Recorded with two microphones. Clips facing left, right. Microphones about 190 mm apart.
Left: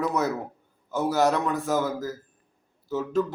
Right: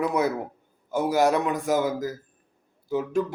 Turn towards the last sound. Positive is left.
turn(degrees=-10)  # may be behind; listen again after turning